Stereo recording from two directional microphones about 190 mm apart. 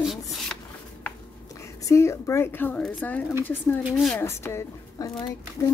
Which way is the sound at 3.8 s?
5° right (ahead or behind).